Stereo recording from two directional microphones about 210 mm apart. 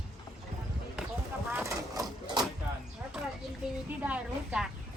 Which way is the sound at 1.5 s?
15° right (ahead or behind).